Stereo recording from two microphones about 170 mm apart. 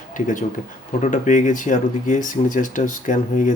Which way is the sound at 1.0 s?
45° left (ahead or behind).